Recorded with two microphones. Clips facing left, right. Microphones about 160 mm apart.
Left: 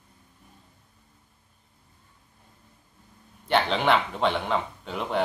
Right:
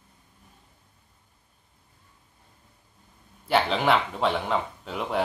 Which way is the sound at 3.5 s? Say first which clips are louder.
Even; 5° right (ahead or behind).